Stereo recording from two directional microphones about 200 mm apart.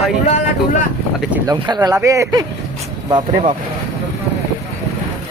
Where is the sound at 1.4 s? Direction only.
20° right (ahead or behind).